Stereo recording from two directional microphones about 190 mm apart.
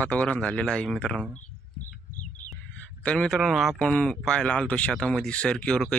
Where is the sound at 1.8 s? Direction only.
40° left (ahead or behind).